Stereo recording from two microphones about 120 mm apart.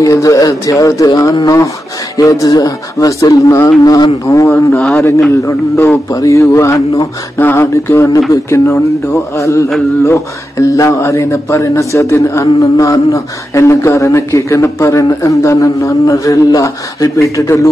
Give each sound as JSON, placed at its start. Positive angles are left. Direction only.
{"t": 0.0, "sound": "speech", "side_deg": 30}
{"t": 4.7, "sound": "a man's voice", "side_deg": 10}
{"t": 5.3, "sound": "speech", "side_deg": 20}